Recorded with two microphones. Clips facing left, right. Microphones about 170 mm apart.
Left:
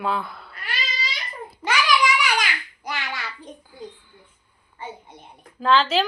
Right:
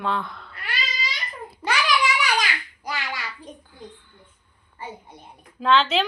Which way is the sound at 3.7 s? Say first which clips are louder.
Left 3 dB; 10° left (ahead or behind).